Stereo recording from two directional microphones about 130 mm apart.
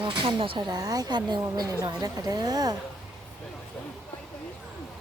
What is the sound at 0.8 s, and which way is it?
A woman's voice, 30° right (ahead or behind).